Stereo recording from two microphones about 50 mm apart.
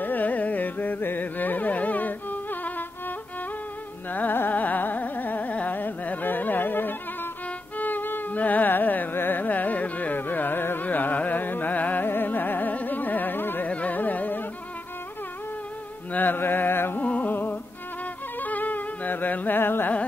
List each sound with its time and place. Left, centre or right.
0.0 s carnatic music: left
4.1 s carnatic music: left
13.7 s carnatic music: left
16.1 s carnatic music: left
17.0 s music: left